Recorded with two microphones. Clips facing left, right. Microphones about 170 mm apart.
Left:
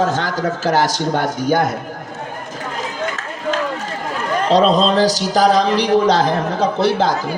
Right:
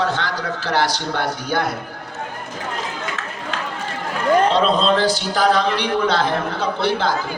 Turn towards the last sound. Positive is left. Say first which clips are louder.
# left 4 dB
turn(degrees=40)  # may be behind; listen again after turning